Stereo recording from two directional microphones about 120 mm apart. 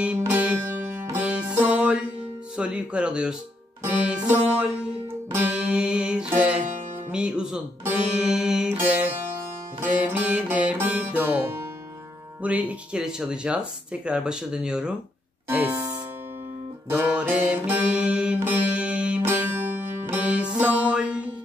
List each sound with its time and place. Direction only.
0.2 s music: 15° right (ahead or behind)
15.4 s music: 20° right (ahead or behind)